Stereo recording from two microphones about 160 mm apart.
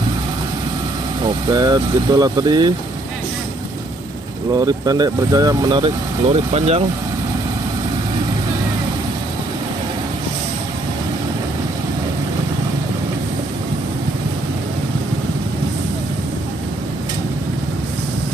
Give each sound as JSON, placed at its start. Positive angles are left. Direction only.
{"t": 1.2, "sound": "speech", "side_deg": -25}
{"t": 4.6, "sound": "speech", "side_deg": -25}